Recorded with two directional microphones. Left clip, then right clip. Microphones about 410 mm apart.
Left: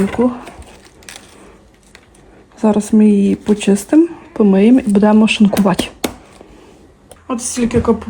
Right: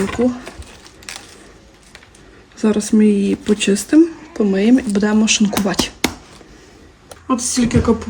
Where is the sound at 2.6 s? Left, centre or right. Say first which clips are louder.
Left 2 dB; centre.